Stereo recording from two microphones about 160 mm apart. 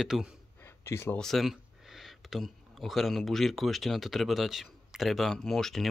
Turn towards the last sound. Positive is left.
turn(degrees=0)  # may be behind; listen again after turning